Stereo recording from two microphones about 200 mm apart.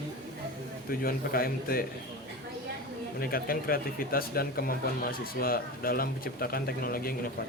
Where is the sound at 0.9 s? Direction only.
45° left (ahead or behind).